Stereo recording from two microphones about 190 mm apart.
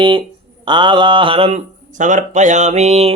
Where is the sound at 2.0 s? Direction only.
40° right (ahead or behind).